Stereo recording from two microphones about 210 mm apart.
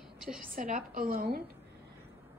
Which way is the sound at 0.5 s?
40° right (ahead or behind).